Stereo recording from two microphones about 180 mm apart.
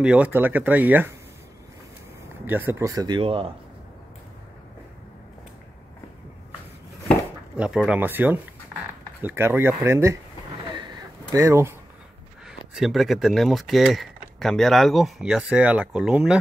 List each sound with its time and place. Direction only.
0.0 s speech: 5° right (ahead or behind)
2.4 s speech: 10° right (ahead or behind); by 3.5 s 30° right (ahead or behind)
7.5 s speech: 5° right (ahead or behind)
10.7 s a sound: 25° right (ahead or behind)
12.4 s speech: centre (ahead or behind)